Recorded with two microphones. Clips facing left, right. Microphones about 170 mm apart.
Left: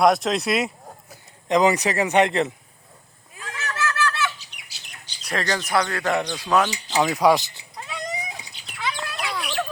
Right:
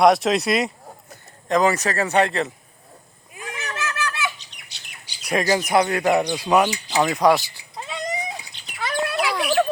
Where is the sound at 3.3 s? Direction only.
15° right (ahead or behind).